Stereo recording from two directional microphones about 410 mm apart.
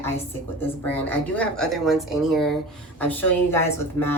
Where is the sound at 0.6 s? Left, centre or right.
Centre.